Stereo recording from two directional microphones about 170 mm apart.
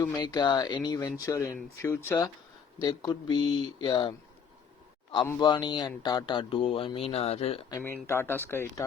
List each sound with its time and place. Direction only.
0.0 s speech: 25° left (ahead or behind)
5.4 s speech: 25° left (ahead or behind)
7.7 s speech: 15° left (ahead or behind)